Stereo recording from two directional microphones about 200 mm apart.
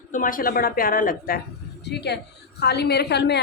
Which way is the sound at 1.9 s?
55° left (ahead or behind).